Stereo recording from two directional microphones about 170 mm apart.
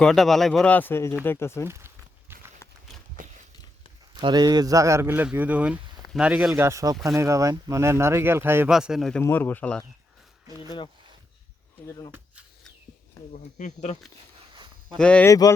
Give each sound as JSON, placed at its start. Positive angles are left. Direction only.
{"t": 0.0, "sound": "speech", "side_deg": 0}
{"t": 1.6, "sound": "speech", "side_deg": -15}
{"t": 2.3, "sound": "clip-clop", "side_deg": -15}
{"t": 3.2, "sound": "a sound", "side_deg": -55}
{"t": 4.2, "sound": "speech", "side_deg": -25}
{"t": 8.7, "sound": "speech", "side_deg": -5}
{"t": 9.2, "sound": "speech", "side_deg": 10}
{"t": 11.9, "sound": "speech", "side_deg": 20}
{"t": 13.3, "sound": "speech", "side_deg": 45}
{"t": 14.5, "sound": "a sound", "side_deg": -25}
{"t": 14.9, "sound": "speech", "side_deg": 5}
{"t": 15.3, "sound": "speech", "side_deg": 20}